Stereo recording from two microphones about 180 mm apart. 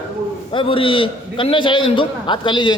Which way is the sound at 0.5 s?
30° left (ahead or behind).